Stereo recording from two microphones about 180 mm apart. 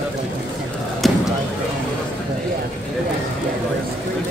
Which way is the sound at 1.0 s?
Centre (ahead or behind).